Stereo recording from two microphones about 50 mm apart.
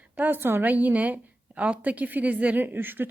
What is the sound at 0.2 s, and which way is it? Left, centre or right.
Speech, right.